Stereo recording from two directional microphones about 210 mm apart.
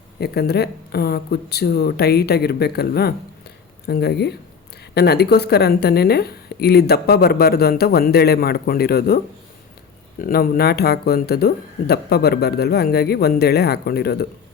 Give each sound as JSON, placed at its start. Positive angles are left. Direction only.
{"t": 0.2, "sound": "a woman's voice", "side_deg": 50}